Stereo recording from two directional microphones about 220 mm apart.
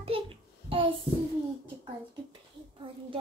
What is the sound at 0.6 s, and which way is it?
Child singing, 25° right (ahead or behind).